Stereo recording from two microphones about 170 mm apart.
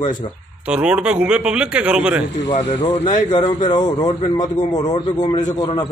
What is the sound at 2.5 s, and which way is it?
Speech, 30° left (ahead or behind).